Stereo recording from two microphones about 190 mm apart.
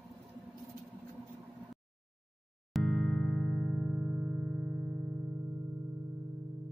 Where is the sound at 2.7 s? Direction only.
Centre (ahead or behind).